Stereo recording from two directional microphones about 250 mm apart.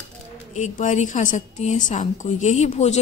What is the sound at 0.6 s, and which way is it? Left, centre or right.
A woman's voice, left.